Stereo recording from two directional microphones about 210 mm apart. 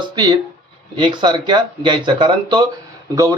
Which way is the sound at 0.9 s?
20° right (ahead or behind).